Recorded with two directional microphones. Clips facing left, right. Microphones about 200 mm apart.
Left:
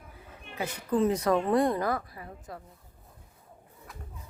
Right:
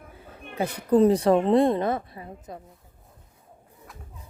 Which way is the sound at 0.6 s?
35° right (ahead or behind).